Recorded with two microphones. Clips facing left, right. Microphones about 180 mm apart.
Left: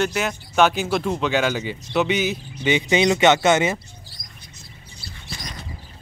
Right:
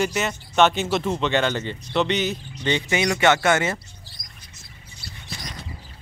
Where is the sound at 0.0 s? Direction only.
Centre (ahead or behind); by 3.7 s 20° left (ahead or behind).